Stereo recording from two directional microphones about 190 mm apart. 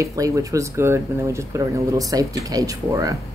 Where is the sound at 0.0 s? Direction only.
15° right (ahead or behind).